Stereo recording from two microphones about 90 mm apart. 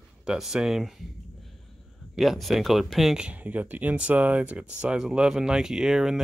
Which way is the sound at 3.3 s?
15° right (ahead or behind).